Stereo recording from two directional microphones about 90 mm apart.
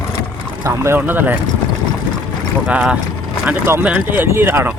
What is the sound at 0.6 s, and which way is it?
Speech, 30° right (ahead or behind).